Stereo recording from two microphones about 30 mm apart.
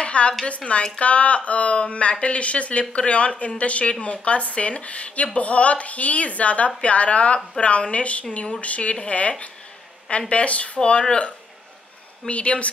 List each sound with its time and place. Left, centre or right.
0.0 s a sound: left
0.7 s a woman's voice: left
2.8 s a woman's voice: left
7.6 s speech: left
7.9 s a woman's voice: left
10.9 s speech: left
12.3 s a woman's voice: left